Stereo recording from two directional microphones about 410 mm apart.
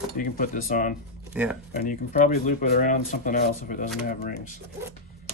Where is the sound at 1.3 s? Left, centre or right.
Centre.